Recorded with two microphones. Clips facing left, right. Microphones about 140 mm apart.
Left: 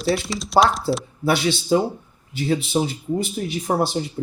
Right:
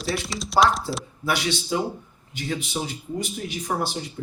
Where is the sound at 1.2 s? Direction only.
30° left (ahead or behind).